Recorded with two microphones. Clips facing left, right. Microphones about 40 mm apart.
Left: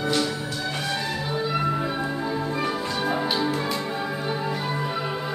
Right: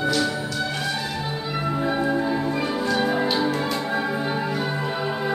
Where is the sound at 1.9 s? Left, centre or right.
Centre.